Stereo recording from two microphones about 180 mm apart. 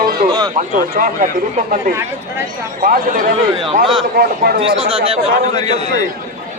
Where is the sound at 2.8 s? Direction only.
50° right (ahead or behind).